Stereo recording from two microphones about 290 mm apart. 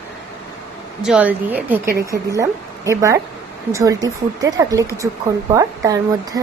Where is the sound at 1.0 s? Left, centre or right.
Centre.